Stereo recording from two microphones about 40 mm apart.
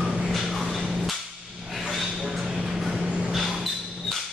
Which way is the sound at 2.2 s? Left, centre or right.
Centre.